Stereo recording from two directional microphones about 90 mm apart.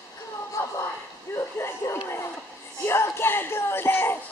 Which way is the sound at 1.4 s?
30° left (ahead or behind).